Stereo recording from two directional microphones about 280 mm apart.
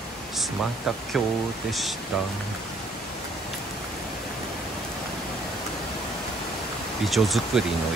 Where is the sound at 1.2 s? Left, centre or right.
Centre.